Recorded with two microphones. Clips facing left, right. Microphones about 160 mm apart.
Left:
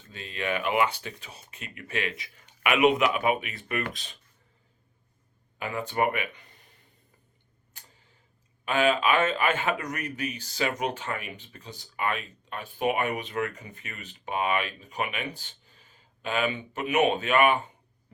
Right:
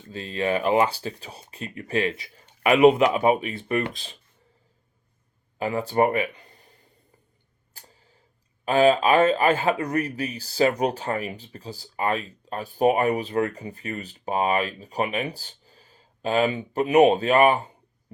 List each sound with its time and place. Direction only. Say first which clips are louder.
0.1 s speech: right 6 dB; 35° right (ahead or behind)
5.5 s speech: right 6 dB; 35° right (ahead or behind)
7.8 s tick-tock: right 4 dB; 35° right (ahead or behind)
8.6 s speech: right 6 dB; 35° right (ahead or behind)